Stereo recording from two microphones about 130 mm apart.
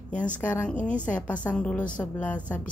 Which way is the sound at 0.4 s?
10° left (ahead or behind).